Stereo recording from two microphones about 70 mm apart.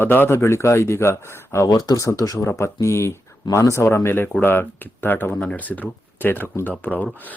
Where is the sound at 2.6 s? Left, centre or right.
Left.